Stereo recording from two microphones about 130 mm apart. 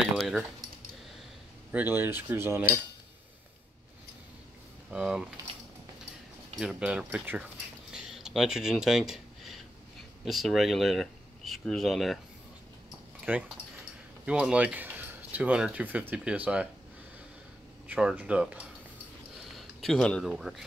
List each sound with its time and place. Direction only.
0.0 s a sound: centre (ahead or behind)
1.7 s cutlery: 15° right (ahead or behind)
4.9 s keys jangling: 5° right (ahead or behind)
6.6 s cutlery: 5° right (ahead or behind)
7.9 s a sound: 5° right (ahead or behind)
10.2 s speech: centre (ahead or behind)
13.3 s cutlery: 15° right (ahead or behind)
14.2 s speech: 10° right (ahead or behind)
17.8 s cutlery: 10° right (ahead or behind)
19.5 s speech: centre (ahead or behind)